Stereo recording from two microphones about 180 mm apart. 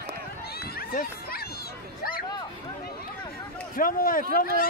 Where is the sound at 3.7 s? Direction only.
50° left (ahead or behind).